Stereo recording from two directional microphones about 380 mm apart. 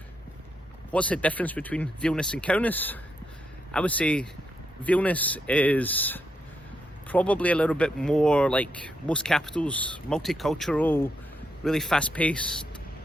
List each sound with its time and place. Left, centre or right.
0.9 s speech: centre